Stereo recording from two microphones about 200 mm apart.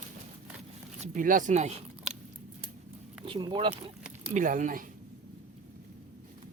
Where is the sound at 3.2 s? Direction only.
25° right (ahead or behind).